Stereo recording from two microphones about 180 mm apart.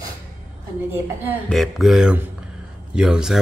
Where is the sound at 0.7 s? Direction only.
15° right (ahead or behind).